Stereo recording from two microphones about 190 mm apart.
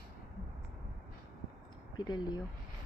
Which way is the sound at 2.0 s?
20° left (ahead or behind).